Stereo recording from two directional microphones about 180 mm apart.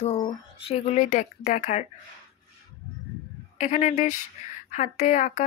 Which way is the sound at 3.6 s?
40° left (ahead or behind).